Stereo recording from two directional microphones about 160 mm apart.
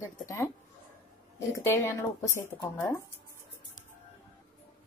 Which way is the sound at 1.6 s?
15° left (ahead or behind).